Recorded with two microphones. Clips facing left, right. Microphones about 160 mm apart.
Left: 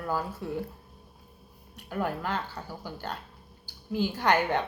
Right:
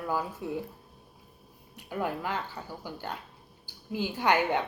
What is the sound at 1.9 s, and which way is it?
Speech, 10° right (ahead or behind).